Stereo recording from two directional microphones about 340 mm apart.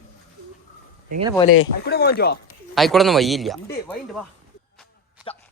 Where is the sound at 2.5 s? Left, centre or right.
Centre.